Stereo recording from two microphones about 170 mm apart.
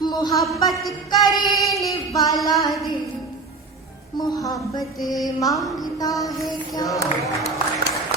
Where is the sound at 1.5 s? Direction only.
Centre (ahead or behind).